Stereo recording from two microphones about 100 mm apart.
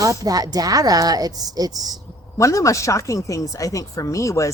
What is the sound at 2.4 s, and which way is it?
Speech, 30° left (ahead or behind).